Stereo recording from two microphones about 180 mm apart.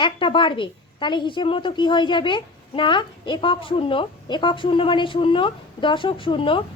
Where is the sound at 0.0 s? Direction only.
25° left (ahead or behind).